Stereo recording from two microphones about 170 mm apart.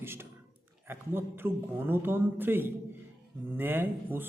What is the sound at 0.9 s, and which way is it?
A man's voice, 15° right (ahead or behind).